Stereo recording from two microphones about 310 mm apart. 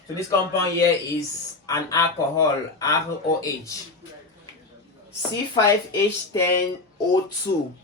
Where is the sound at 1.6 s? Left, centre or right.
Centre.